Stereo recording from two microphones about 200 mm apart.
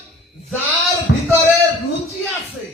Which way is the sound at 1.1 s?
65° left (ahead or behind).